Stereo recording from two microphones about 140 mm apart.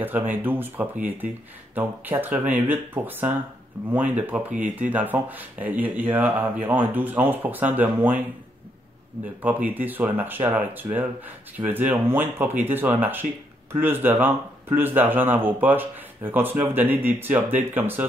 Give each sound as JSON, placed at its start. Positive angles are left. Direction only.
{"t": 0.3, "sound": "speech", "side_deg": -15}
{"t": 9.4, "sound": "speech", "side_deg": -10}